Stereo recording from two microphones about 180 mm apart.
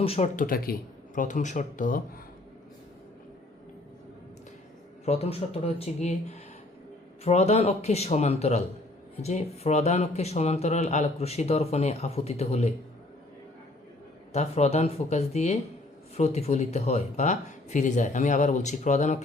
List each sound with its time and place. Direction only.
0.0 s speech: 35° left (ahead or behind)
0.3 s speech: 55° left (ahead or behind)
5.0 s speech: 35° left (ahead or behind)
14.3 s speech: 35° left (ahead or behind)